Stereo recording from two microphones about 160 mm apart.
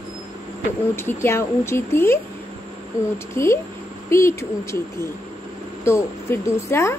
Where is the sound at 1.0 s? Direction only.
15° left (ahead or behind).